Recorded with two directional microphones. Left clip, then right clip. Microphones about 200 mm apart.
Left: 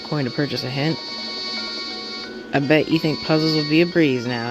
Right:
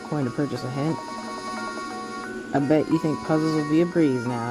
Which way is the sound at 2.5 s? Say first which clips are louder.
Left 4 dB; 10° left (ahead or behind).